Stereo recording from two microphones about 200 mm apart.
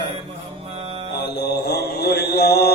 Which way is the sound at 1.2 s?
55° left (ahead or behind).